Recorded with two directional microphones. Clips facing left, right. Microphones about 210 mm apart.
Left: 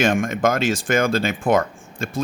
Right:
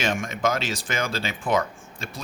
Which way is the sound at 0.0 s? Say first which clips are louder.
Left 6 dB; 50° left (ahead or behind).